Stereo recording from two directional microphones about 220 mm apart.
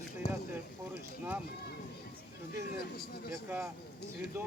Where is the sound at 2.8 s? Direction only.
45° left (ahead or behind).